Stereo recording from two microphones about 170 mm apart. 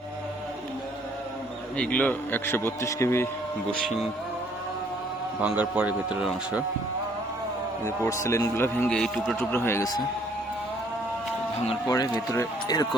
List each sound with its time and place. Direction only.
1.7 s a man's voice: 5° left (ahead or behind)
3.7 s speech: centre (ahead or behind)
5.4 s speech: 10° right (ahead or behind)
7.9 s a man's voice: 20° left (ahead or behind); by 9.4 s centre (ahead or behind)
9.4 s a man's voice: 15° left (ahead or behind)
11.9 s speech: 20° left (ahead or behind)